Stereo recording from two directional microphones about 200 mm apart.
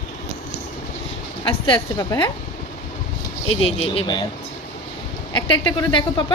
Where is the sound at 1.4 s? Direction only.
25° left (ahead or behind).